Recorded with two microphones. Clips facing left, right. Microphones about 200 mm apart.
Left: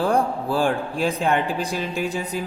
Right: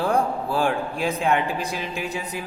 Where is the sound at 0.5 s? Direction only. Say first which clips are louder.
Left 2 dB; 35° left (ahead or behind).